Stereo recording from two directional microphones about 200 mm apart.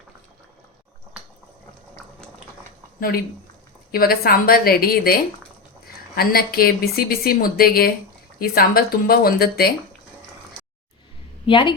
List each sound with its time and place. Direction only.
3.9 s speech: 50° left (ahead or behind)
6.1 s speech: 50° left (ahead or behind)
11.4 s a woman's voice: 25° left (ahead or behind)